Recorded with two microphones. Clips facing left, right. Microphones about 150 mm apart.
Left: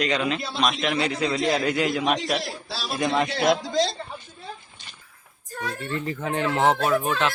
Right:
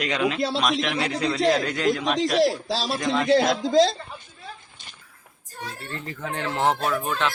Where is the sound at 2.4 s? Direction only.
90° right.